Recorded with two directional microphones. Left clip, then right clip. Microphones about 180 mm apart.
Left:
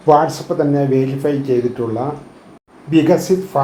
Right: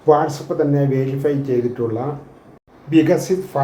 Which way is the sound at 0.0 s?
30° right (ahead or behind).